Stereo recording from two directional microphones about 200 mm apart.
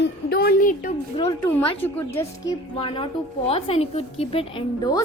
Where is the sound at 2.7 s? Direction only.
30° left (ahead or behind).